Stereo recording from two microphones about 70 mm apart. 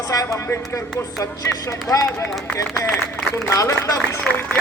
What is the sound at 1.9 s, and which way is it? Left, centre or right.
Speech, left.